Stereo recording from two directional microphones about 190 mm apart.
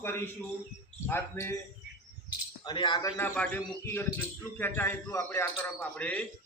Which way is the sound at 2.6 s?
25° left (ahead or behind).